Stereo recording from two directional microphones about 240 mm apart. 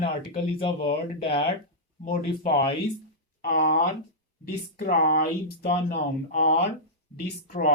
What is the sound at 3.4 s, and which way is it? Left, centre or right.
Speech, left.